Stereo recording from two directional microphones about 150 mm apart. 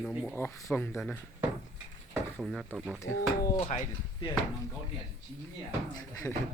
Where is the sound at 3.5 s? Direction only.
50° left (ahead or behind).